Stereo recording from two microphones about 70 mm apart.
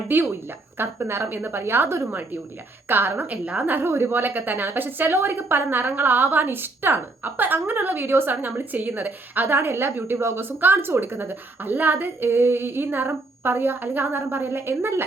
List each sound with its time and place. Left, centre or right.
0.1 s a woman's voice: right